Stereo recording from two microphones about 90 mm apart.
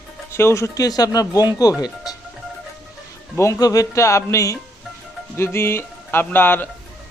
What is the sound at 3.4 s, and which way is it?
Speech, 40° left (ahead or behind).